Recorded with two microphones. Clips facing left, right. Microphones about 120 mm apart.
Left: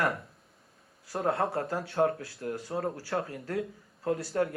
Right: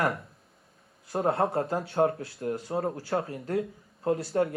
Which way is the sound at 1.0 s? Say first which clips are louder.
Right 3 dB; 25° right (ahead or behind).